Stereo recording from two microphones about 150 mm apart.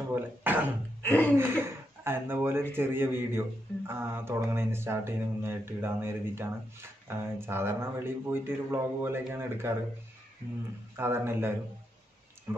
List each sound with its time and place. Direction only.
0.1 s speech: 15° right (ahead or behind)
1.0 s speech: 10° left (ahead or behind)
1.3 s speech: 15° right (ahead or behind)
11.0 s speech: 15° right (ahead or behind)